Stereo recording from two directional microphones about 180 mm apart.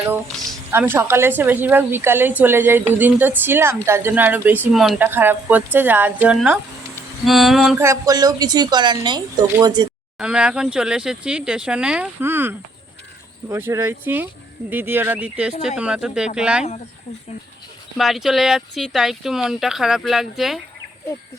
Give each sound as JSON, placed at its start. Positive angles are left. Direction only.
{"t": 0.7, "sound": "a woman's voice", "side_deg": -10}
{"t": 7.8, "sound": "speech", "side_deg": -15}
{"t": 10.2, "sound": "a woman's voice", "side_deg": -5}
{"t": 17.9, "sound": "speech", "side_deg": 0}